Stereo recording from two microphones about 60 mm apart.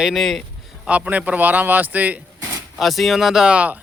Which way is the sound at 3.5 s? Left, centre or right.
Right.